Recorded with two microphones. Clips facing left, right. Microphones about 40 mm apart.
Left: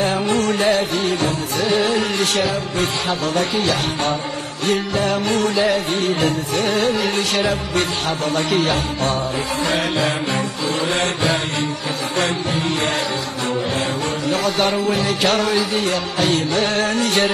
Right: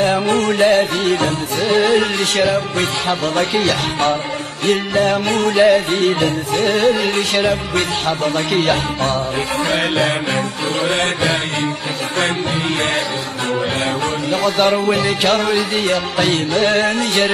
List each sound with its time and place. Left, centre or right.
0.4 s music: right
14.4 s music: right
16.3 s music: right